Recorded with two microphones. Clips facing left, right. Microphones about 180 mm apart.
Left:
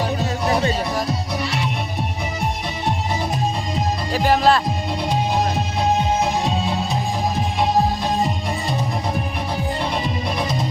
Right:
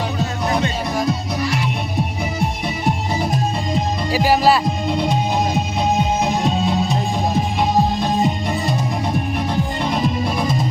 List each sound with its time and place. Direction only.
1.4 s music: 30° left (ahead or behind)
3.8 s music: 5° right (ahead or behind)
9.8 s music: centre (ahead or behind)